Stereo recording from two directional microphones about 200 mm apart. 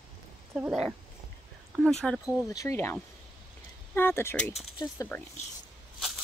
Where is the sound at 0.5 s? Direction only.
Centre (ahead or behind).